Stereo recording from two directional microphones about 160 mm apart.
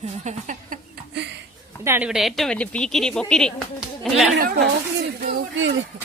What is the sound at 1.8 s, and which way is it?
Speech, 15° right (ahead or behind).